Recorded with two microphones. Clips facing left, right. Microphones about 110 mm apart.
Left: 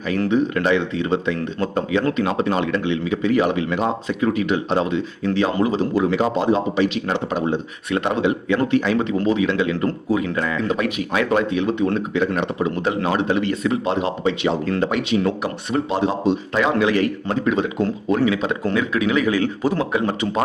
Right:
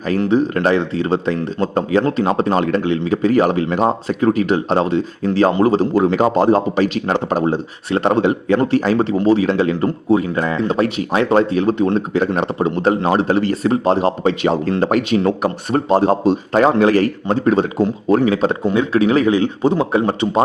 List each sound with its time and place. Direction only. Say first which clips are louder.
0.3 s speech: right 3 dB; 40° right (ahead or behind)
18.6 s a man's voice: right 5 dB; 25° right (ahead or behind)
19.3 s speech: right 5 dB; 20° right (ahead or behind)